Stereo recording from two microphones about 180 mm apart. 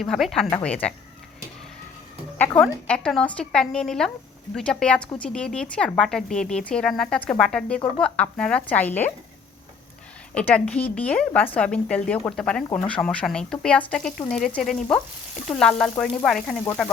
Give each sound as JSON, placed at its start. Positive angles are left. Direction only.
{"t": 0.0, "sound": "speech", "side_deg": 0}
{"t": 2.4, "sound": "speech", "side_deg": 10}
{"t": 10.3, "sound": "speech", "side_deg": 5}